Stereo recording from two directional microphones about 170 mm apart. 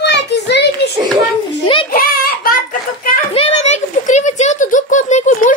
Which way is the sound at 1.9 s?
60° left (ahead or behind).